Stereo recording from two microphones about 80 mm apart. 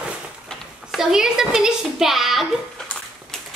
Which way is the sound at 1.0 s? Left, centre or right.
Centre.